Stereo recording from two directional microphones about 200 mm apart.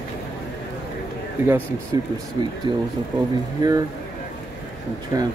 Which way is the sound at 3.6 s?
20° right (ahead or behind).